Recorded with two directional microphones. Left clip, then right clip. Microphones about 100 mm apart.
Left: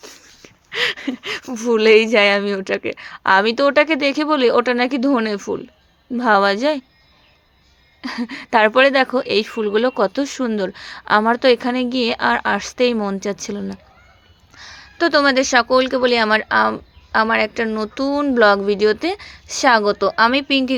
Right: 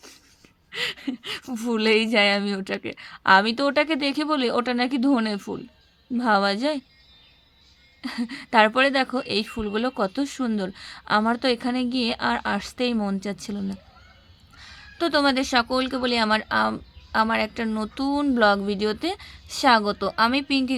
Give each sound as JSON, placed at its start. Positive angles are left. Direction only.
{"t": 0.4, "sound": "a sound", "side_deg": -5}
{"t": 1.5, "sound": "speech", "side_deg": -20}
{"t": 8.0, "sound": "a woman's voice", "side_deg": -10}